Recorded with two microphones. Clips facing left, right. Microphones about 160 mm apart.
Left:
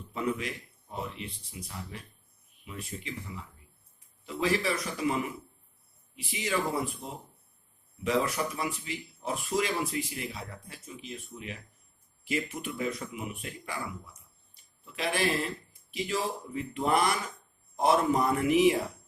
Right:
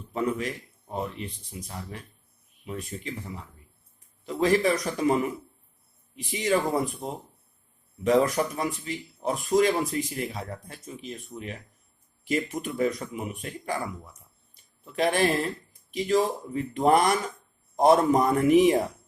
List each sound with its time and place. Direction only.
0.1 s a man's voice: 40° right (ahead or behind)
4.3 s speech: 45° right (ahead or behind)
6.3 s speech: 45° right (ahead or behind)
14.5 s a sound: 45° right (ahead or behind)
15.9 s speech: 45° right (ahead or behind)